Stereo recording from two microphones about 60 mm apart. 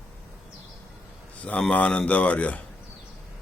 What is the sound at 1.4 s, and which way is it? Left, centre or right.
Speech, left.